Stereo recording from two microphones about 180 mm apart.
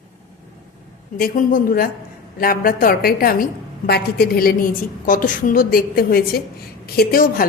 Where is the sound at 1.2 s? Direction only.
50° left (ahead or behind).